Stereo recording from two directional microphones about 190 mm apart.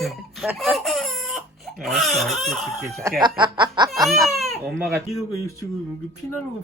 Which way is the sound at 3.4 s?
25° right (ahead or behind).